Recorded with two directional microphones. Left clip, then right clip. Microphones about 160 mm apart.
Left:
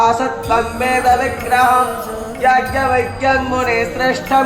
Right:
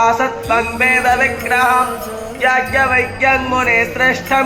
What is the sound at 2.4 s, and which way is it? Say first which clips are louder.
Speech: even; 30° right (ahead or behind).